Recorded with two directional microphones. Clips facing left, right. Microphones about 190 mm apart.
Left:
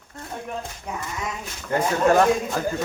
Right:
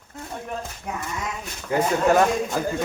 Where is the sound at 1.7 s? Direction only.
10° right (ahead or behind).